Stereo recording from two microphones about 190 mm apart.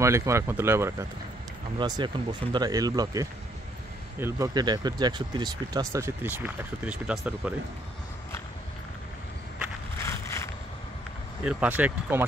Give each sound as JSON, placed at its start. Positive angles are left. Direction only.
{"t": 0.0, "sound": "speech", "side_deg": -15}
{"t": 1.8, "sound": "speech", "side_deg": -25}
{"t": 10.0, "sound": "a sound", "side_deg": 15}
{"t": 11.4, "sound": "speech", "side_deg": -10}